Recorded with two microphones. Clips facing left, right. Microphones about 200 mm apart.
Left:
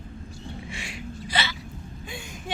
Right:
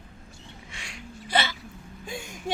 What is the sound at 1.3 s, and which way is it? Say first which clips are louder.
Hiccup: right 4 dB; 55° right (ahead or behind).